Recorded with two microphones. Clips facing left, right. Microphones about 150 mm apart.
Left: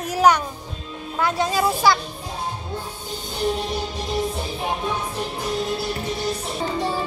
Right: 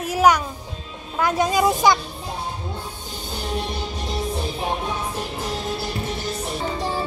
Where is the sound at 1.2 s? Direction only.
15° right (ahead or behind).